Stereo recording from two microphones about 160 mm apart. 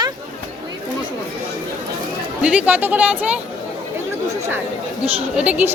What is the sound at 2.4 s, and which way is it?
Speech, 5° right (ahead or behind).